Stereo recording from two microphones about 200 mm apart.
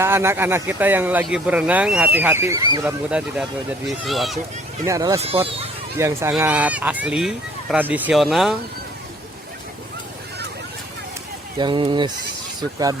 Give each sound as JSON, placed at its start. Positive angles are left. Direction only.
{"t": 0.0, "sound": "speech", "side_deg": -10}
{"t": 4.9, "sound": "speech", "side_deg": -15}
{"t": 5.2, "sound": "speech", "side_deg": -30}
{"t": 6.0, "sound": "speech", "side_deg": -15}
{"t": 11.5, "sound": "speech", "side_deg": -25}